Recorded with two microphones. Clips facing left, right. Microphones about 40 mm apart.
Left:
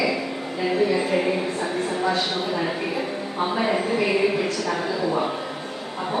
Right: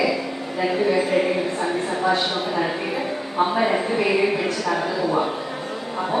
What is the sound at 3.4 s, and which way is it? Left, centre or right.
Speech, centre.